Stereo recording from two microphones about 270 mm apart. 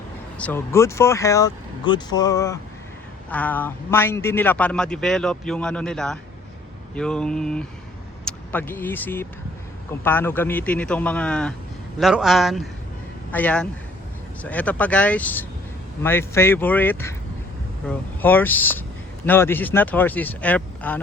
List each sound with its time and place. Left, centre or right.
0.3 s speech: centre